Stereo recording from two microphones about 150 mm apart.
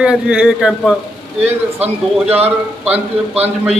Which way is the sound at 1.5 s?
45° right (ahead or behind).